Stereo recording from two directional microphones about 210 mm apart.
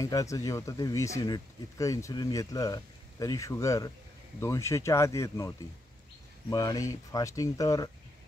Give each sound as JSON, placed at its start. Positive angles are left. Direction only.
{"t": 0.0, "sound": "speech", "side_deg": 15}
{"t": 6.5, "sound": "speech", "side_deg": 20}